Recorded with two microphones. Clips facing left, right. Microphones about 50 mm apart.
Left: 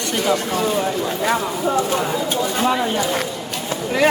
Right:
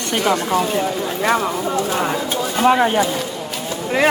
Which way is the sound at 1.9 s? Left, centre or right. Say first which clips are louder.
Right 1 dB; right.